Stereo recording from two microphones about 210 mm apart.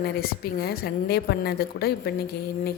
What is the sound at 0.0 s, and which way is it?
A woman's voice, 45° left (ahead or behind).